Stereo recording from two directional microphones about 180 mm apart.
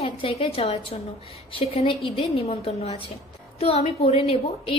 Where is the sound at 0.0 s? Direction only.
30° left (ahead or behind).